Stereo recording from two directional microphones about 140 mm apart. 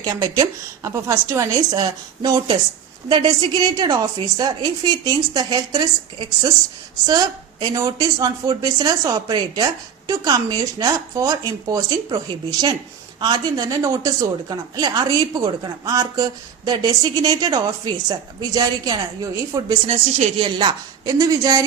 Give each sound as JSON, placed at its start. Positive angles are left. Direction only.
{"t": 0.0, "sound": "a woman's voice", "side_deg": -25}
{"t": 19.9, "sound": "a woman's voice", "side_deg": -50}
{"t": 20.4, "sound": "a woman's voice", "side_deg": -30}